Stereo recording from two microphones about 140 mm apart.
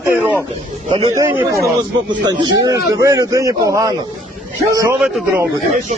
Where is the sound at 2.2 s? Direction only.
30° right (ahead or behind).